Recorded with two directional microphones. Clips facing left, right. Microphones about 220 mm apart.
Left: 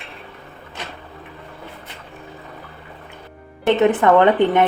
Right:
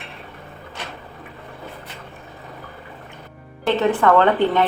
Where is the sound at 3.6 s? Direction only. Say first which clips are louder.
Left 3 dB; 20° left (ahead or behind).